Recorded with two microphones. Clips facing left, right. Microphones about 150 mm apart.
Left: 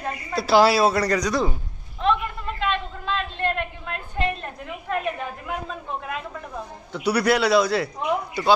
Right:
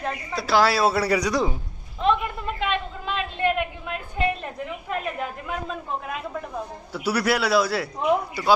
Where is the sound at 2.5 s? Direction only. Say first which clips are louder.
Left 2 dB; 15° right (ahead or behind).